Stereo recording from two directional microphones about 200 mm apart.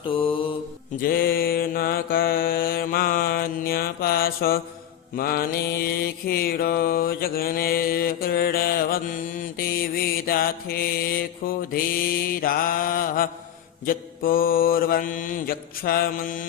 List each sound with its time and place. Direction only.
0.1 s mantra: 25° left (ahead or behind)
1.0 s mantra: 50° left (ahead or behind)